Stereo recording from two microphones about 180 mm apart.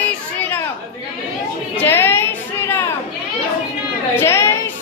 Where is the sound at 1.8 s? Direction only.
15° left (ahead or behind).